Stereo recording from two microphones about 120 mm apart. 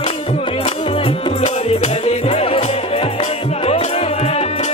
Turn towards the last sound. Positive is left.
turn(degrees=60)  # may be behind; listen again after turning